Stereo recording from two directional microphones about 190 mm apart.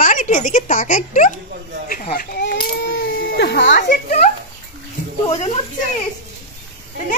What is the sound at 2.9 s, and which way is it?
Baby cry, 65° left (ahead or behind).